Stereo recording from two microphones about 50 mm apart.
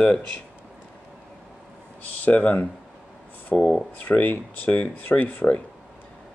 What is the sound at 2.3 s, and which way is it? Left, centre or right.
Speech, left.